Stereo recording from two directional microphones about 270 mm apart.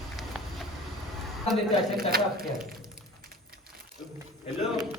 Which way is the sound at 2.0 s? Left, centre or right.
Right.